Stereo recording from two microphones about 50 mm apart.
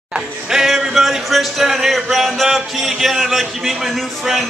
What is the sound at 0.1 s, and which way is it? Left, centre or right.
Music, centre.